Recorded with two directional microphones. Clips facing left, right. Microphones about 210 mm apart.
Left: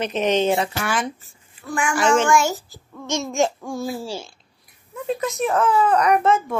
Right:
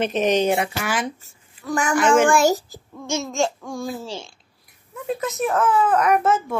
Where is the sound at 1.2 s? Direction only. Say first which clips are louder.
Right 4 dB; 40° right (ahead or behind).